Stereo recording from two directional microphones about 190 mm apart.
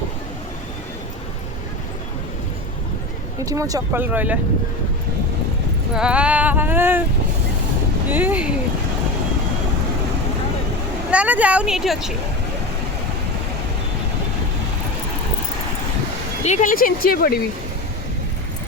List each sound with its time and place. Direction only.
3.4 s speech: 20° right (ahead or behind)
5.9 s speech: 5° right (ahead or behind)
8.1 s speech: 10° right (ahead or behind)
11.1 s speech: 5° right (ahead or behind)
16.4 s speech: 40° left (ahead or behind)